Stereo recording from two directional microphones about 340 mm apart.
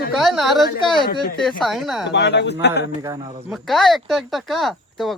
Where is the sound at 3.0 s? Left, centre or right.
Centre.